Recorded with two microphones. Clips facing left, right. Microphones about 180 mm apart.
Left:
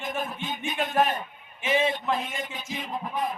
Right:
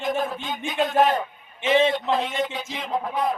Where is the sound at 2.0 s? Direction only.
90° right.